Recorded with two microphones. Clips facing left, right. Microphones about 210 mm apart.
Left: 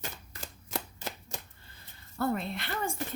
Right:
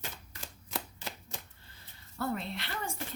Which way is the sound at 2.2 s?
50° left (ahead or behind).